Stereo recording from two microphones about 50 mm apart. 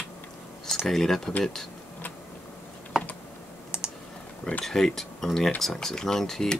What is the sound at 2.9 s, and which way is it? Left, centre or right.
Computer keyboard, centre.